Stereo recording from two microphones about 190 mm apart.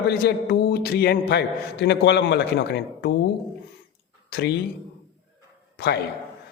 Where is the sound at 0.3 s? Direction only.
60° left (ahead or behind).